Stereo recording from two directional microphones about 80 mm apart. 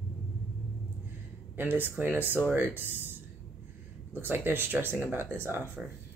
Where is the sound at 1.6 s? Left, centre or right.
Right.